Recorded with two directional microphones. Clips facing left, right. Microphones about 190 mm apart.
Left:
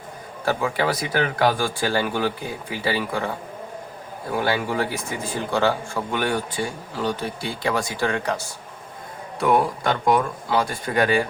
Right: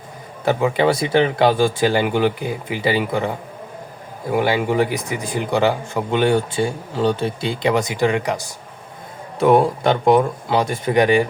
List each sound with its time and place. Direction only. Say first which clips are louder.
0.4 s speech: right 6 dB; 20° right (ahead or behind)
9.4 s speech: right 6 dB; 25° right (ahead or behind)